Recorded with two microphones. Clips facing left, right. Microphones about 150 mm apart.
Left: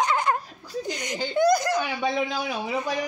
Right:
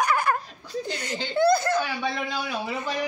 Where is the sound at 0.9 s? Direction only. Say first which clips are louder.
Left 1 dB; 15° left (ahead or behind).